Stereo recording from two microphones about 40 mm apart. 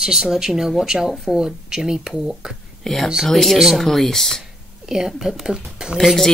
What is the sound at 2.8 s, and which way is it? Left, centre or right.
Speech, centre.